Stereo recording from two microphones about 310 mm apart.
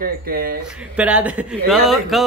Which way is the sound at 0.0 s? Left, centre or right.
Right.